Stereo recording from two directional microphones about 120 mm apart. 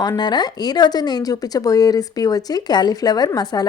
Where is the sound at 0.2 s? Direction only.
35° left (ahead or behind).